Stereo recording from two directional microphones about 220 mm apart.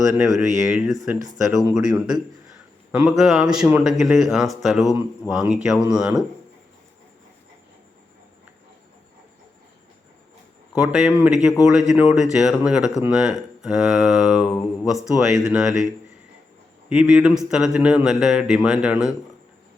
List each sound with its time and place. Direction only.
0.3 s speech: centre (ahead or behind)
0.9 s speech: 15° right (ahead or behind)
1.5 s speech: centre (ahead or behind)
10.8 s speech: 5° right (ahead or behind)
16.9 s speech: 5° right (ahead or behind)